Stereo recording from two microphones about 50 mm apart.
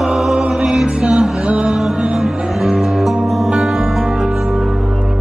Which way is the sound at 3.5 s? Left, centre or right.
Centre.